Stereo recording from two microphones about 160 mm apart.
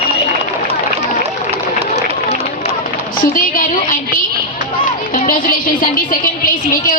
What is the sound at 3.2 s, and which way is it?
Music, 60° left (ahead or behind).